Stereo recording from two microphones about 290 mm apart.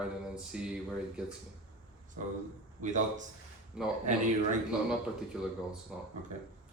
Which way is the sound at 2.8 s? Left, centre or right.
Right.